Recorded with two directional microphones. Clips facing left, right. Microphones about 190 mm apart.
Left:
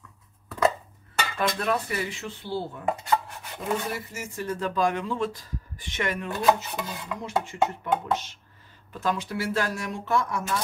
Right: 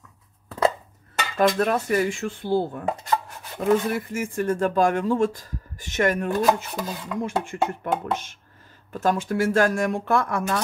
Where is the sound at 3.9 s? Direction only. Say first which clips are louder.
Right 8 dB; 55° right (ahead or behind).